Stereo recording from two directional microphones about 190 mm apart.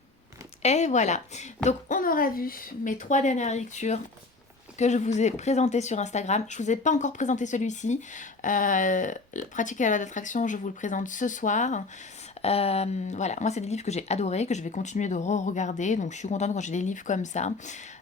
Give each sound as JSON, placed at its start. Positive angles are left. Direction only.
{"t": 0.6, "sound": "speech", "side_deg": 35}